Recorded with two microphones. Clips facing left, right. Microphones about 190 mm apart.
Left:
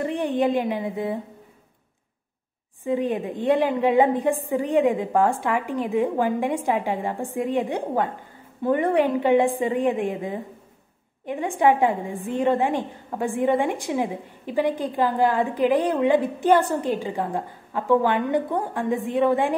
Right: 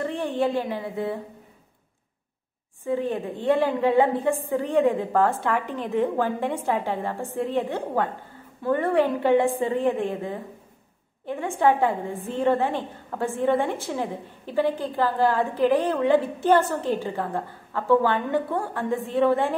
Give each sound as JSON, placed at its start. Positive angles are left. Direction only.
{"t": 0.0, "sound": "a woman's voice", "side_deg": 15}
{"t": 2.8, "sound": "a woman's voice", "side_deg": 15}